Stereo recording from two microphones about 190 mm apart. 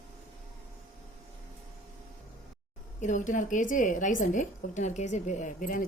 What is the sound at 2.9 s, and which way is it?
A woman's voice, 40° left (ahead or behind).